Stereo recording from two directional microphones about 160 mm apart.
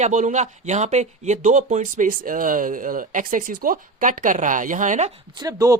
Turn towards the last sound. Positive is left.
turn(degrees=-20)  # may be behind; listen again after turning